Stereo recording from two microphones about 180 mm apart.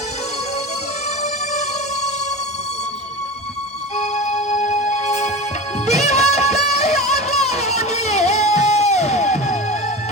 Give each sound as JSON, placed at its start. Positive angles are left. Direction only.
{"t": 3.9, "sound": "music", "side_deg": 40}